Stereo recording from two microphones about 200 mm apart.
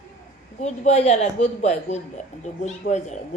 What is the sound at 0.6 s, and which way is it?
A woman's voice, 35° left (ahead or behind).